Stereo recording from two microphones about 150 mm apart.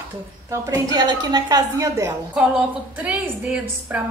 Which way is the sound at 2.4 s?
10° right (ahead or behind).